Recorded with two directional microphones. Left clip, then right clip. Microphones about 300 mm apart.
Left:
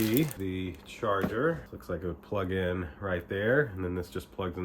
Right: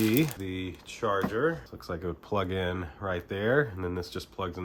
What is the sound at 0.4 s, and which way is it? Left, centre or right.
Speech, right.